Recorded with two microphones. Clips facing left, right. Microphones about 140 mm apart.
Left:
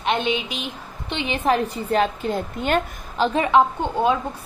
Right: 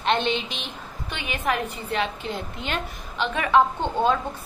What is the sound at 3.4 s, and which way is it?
Speech, 15° left (ahead or behind).